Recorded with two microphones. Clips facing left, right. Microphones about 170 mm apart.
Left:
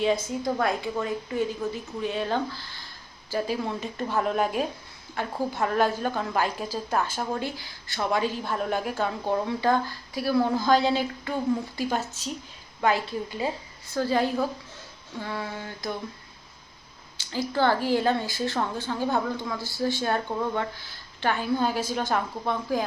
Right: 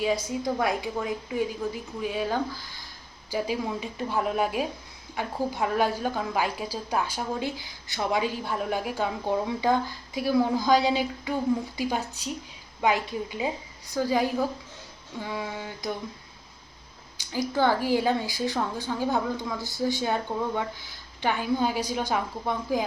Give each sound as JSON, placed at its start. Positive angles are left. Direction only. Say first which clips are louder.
{"t": 0.0, "sound": "a woman's voice", "louder": "left 1 dB", "side_deg": -10}
{"t": 17.2, "sound": "a woman's voice", "louder": "even", "side_deg": -15}
{"t": 19.5, "sound": "a woman's voice", "louder": "even", "side_deg": -20}